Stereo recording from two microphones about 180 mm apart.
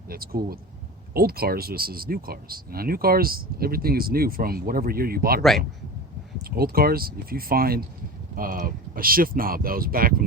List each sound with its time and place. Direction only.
0.1 s speech: 55° right (ahead or behind)
5.4 s speech: centre (ahead or behind)
6.4 s speech: 55° right (ahead or behind)